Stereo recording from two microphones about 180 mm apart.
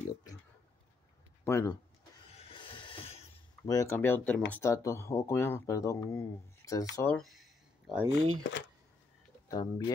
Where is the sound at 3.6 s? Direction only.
20° left (ahead or behind).